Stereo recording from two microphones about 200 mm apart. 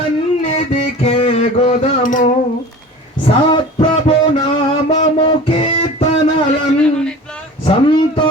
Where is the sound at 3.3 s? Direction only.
25° left (ahead or behind).